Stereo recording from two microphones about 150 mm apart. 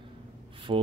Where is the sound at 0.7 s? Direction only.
35° right (ahead or behind).